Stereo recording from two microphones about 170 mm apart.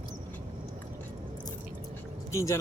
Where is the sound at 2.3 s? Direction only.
15° left (ahead or behind).